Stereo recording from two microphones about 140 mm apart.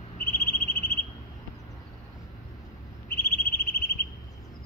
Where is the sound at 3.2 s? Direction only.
15° left (ahead or behind).